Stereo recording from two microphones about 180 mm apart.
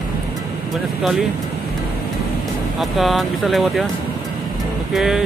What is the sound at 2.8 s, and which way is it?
Speech, centre (ahead or behind).